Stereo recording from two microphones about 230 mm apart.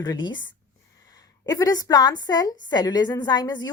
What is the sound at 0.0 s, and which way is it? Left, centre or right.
A woman's voice, centre.